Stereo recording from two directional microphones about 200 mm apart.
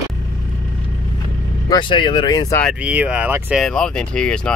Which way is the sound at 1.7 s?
25° left (ahead or behind).